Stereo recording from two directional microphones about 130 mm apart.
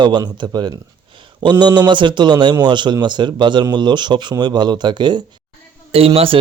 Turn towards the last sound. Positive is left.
turn(degrees=-45)  # may be behind; listen again after turning